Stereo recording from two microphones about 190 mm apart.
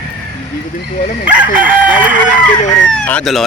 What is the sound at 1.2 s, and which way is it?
Crowing, 5° right (ahead or behind).